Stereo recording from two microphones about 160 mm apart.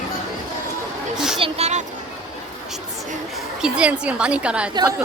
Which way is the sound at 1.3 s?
35° right (ahead or behind).